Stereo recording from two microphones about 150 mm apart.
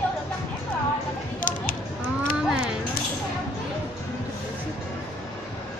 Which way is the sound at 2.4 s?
5° right (ahead or behind).